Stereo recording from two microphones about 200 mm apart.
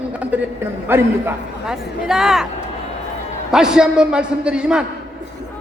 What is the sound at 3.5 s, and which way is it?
A man's voice, 5° right (ahead or behind).